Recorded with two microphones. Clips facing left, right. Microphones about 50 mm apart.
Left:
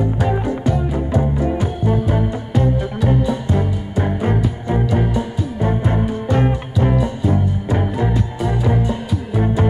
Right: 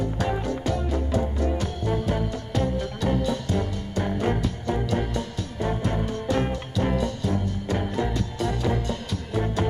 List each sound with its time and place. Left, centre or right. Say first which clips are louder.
0.0 s music: left 7 dB; centre